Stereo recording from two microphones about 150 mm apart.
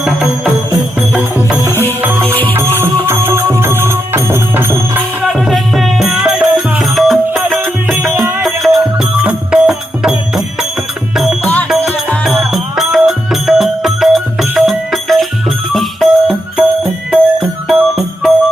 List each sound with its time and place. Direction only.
0.0 s music: centre (ahead or behind)
1.7 s music: 15° left (ahead or behind)
2.0 s music: 15° right (ahead or behind)
5.2 s music: centre (ahead or behind)